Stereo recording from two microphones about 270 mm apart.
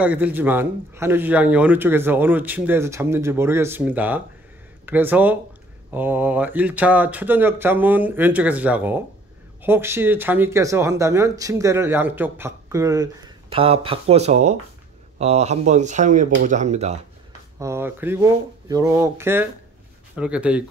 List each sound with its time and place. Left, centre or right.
0.0 s speech: centre; by 17.0 s right
17.6 s speech: centre